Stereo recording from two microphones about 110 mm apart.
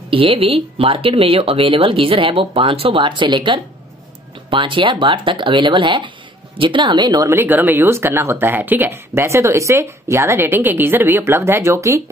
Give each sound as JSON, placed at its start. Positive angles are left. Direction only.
{"t": 0.1, "sound": "speech", "side_deg": -60}
{"t": 7.2, "sound": "speech", "side_deg": -20}